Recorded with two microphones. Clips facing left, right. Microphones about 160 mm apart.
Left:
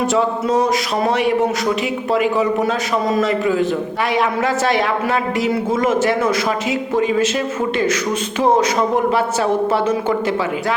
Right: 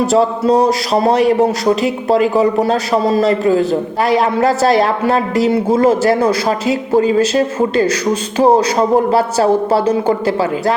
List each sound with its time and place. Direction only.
0.0 s speech: 35° right (ahead or behind)
9.0 s speech: 35° right (ahead or behind)